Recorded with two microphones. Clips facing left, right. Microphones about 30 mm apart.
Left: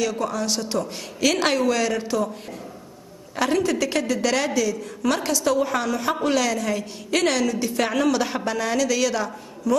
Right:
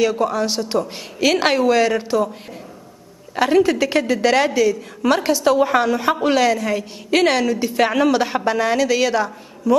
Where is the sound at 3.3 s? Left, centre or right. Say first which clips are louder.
Right 6 dB; centre.